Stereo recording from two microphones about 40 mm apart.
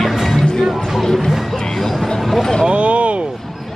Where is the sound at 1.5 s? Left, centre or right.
Centre.